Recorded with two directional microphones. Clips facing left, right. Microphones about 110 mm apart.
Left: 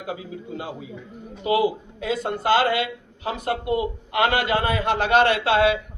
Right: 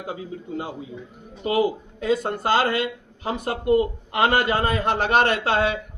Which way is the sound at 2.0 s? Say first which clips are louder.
Even; 40° right (ahead or behind).